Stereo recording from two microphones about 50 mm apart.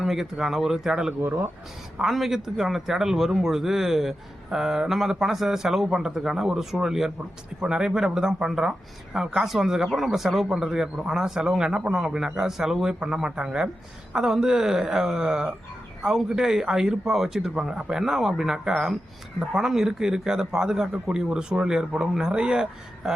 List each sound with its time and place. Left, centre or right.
0.0 s a man's voice: centre
1.2 s speech: right
2.0 s a man's voice: centre